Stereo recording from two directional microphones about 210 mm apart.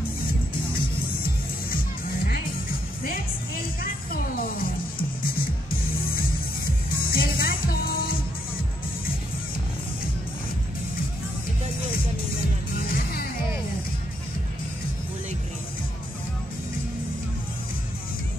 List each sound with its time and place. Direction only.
0.7 s music: 45° left (ahead or behind)
3.8 s music: 45° left (ahead or behind)
5.7 s music: 45° left (ahead or behind)
12.8 s music: 45° left (ahead or behind)